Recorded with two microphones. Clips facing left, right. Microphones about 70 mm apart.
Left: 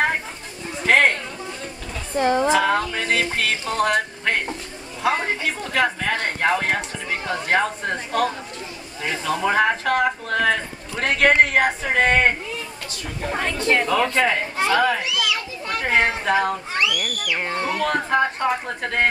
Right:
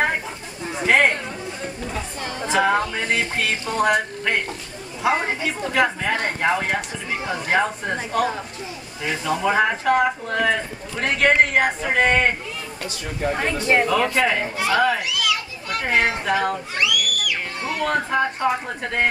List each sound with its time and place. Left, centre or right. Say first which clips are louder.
0.8 s a sound: even; centre
2.1 s a woman's voice: left 11 dB; left
2.5 s speech: even; centre
5.0 s speech: right 1 dB; centre
13.2 s speech: right 1 dB; centre
13.8 s speech: even; centre
16.8 s a sound: right 3 dB; left
17.7 s speech: even; centre